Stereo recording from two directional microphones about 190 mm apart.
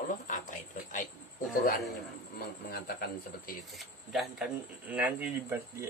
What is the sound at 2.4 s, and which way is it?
A man's voice, 55° left (ahead or behind).